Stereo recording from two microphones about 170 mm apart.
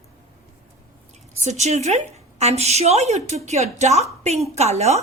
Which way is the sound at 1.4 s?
40° right (ahead or behind).